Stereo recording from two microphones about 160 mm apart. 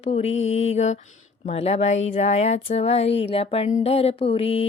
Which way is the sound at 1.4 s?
40° left (ahead or behind).